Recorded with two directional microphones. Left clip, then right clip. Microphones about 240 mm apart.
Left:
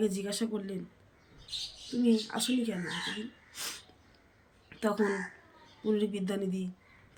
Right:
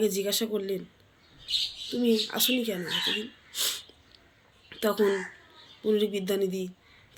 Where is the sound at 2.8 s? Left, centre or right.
Left.